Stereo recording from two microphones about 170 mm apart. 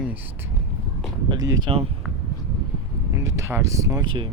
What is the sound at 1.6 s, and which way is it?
Speech, 35° right (ahead or behind).